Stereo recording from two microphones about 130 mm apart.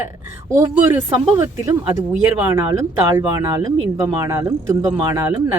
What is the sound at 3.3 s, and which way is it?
A woman's voice, 30° right (ahead or behind).